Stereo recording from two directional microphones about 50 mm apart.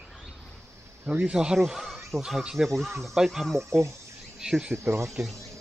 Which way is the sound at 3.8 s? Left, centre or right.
Right.